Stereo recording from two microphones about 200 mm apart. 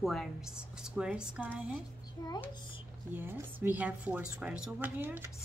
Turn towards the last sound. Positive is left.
turn(degrees=-10)  # may be behind; listen again after turning